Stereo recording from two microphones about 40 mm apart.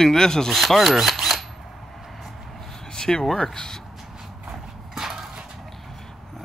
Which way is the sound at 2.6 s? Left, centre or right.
Centre.